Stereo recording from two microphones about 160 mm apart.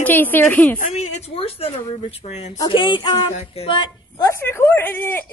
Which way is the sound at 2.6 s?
30° left (ahead or behind).